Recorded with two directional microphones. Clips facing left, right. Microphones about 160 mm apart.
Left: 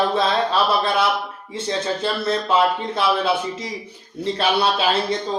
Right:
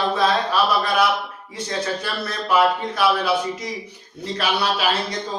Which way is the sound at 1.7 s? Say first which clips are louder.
Left 3 dB; 25° left (ahead or behind).